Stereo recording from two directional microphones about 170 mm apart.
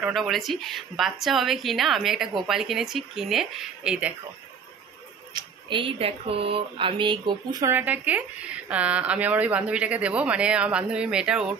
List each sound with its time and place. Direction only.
0.0 s a woman's voice: centre (ahead or behind)
5.3 s speech: 30° right (ahead or behind)
7.6 s a woman's voice: 10° right (ahead or behind)